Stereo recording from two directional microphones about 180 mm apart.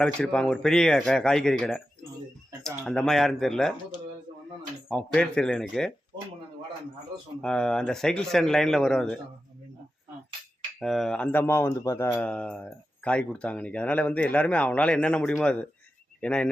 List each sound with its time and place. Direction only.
0.0 s speech: 5° left (ahead or behind)
4.9 s speech: 5° left (ahead or behind)
7.4 s speech: 5° left (ahead or behind)
10.8 s speech: centre (ahead or behind)